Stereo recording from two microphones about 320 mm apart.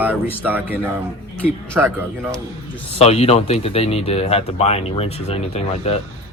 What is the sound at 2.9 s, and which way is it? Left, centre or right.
Speech, centre.